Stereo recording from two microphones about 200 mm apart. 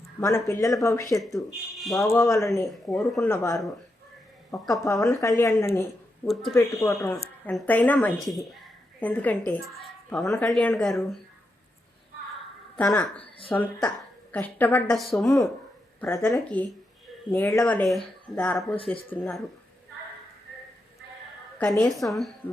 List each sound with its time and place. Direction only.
0.2 s a woman's voice: 15° left (ahead or behind)
1.7 s speech: centre (ahead or behind)
2.0 s a woman's voice: 15° left (ahead or behind)
2.6 s speech: centre (ahead or behind)
3.2 s a woman's voice: 15° left (ahead or behind)
6.2 s speech: centre (ahead or behind)
6.7 s a woman's voice: 15° left (ahead or behind)
10.5 s speech: 5° left (ahead or behind)
12.8 s a woman's voice: 5° left (ahead or behind)
16.0 s a woman's voice: 10° left (ahead or behind)
21.6 s speech: 5° left (ahead or behind)